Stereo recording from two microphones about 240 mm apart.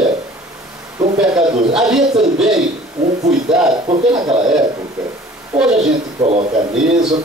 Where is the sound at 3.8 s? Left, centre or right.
Right.